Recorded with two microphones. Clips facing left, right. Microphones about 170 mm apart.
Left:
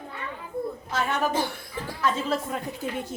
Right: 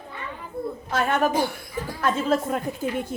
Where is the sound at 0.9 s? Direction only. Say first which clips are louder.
Right 4 dB; 55° right (ahead or behind).